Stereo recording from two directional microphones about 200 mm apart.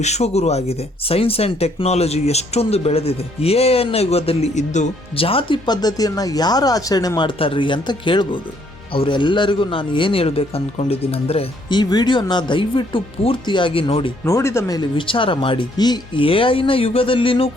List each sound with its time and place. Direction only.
0.0 s speech: 35° left (ahead or behind)
14.3 s speech: 15° left (ahead or behind)